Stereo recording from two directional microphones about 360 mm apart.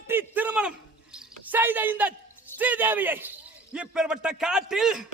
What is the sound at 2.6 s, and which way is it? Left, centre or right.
Speech, centre.